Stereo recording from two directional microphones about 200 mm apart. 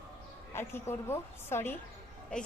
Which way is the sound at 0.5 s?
10° left (ahead or behind).